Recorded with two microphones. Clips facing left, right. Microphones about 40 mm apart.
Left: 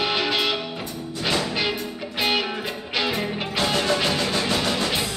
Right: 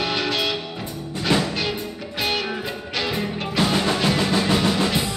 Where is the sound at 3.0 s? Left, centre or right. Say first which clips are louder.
Right 1 dB; centre.